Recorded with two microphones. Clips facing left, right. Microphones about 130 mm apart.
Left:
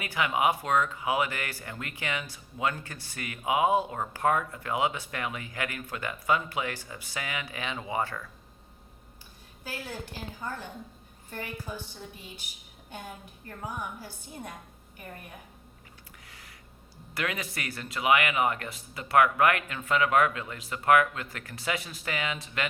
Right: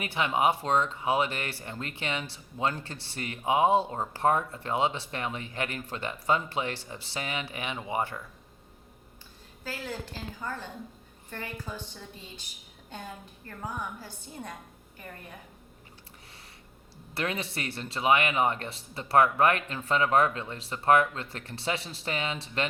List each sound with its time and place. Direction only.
0.0 s speech: 25° right (ahead or behind)
9.6 s a woman's voice: 15° left (ahead or behind)
13.7 s a woman's voice: 15° left (ahead or behind)
17.2 s speech: 30° right (ahead or behind)